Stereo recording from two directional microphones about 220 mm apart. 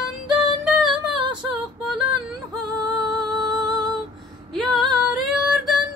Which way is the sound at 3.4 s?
20° right (ahead or behind).